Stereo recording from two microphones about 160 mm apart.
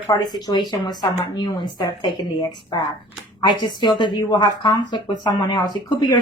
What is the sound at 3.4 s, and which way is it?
A woman's voice, 30° left (ahead or behind).